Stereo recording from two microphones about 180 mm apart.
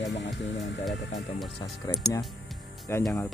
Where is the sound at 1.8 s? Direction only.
20° left (ahead or behind).